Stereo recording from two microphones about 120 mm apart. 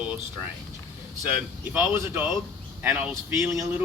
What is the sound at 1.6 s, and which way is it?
Speech, 15° right (ahead or behind).